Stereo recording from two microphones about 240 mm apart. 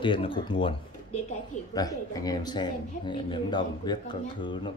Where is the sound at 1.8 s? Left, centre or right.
Centre.